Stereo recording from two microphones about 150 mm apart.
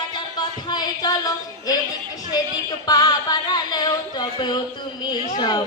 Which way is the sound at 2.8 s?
25° left (ahead or behind).